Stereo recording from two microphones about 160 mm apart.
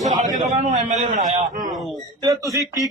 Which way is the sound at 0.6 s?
45° right (ahead or behind).